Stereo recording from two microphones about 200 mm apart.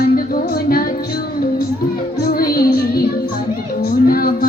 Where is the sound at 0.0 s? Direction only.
45° left (ahead or behind).